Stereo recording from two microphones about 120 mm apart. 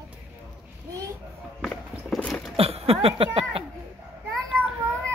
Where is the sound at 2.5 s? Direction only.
55° right (ahead or behind).